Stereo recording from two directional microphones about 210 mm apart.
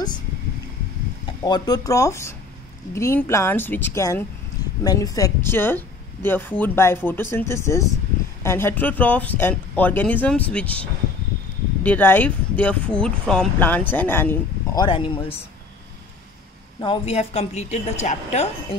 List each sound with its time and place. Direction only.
1.2 s speech: 20° left (ahead or behind)
16.8 s a woman's voice: 25° left (ahead or behind)